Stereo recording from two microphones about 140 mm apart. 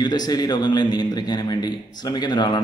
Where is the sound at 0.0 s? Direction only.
30° left (ahead or behind).